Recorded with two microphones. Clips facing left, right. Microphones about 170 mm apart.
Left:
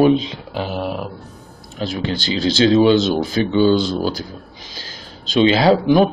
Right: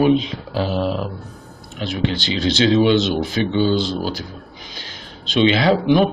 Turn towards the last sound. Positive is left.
turn(degrees=40)  # may be behind; listen again after turning